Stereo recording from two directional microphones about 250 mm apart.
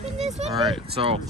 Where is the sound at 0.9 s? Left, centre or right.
Right.